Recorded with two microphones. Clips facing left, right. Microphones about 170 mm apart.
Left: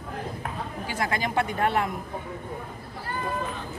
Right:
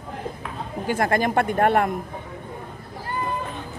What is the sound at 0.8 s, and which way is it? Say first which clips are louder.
Speech: right 8 dB; 50° right (ahead or behind).